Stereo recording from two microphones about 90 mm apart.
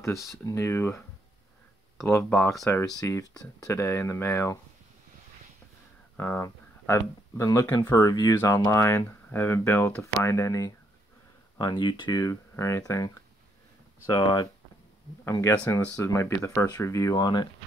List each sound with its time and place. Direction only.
0.0 s speech: 35° left (ahead or behind)
2.2 s speech: 20° left (ahead or behind)
2.6 s speech: 35° left (ahead or behind)
6.1 s speech: 30° left (ahead or behind); by 8.6 s 45° left (ahead or behind)
8.6 s speech: 30° left (ahead or behind)
11.5 s speech: 55° left (ahead or behind)
12.2 s speech: 35° left (ahead or behind)
14.2 s speech: 55° left (ahead or behind)
15.4 s speech: 30° left (ahead or behind)
17.2 s speech: 55° left (ahead or behind)